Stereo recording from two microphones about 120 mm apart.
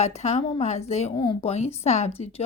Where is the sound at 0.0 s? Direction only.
65° left (ahead or behind).